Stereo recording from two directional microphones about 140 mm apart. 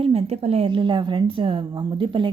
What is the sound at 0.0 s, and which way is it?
A woman's voice, 50° right (ahead or behind).